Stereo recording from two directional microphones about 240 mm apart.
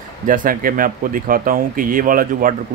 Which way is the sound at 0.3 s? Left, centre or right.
Right.